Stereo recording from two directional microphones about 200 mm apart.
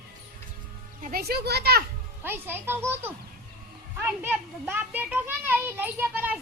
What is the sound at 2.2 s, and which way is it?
Speech, 10° right (ahead or behind).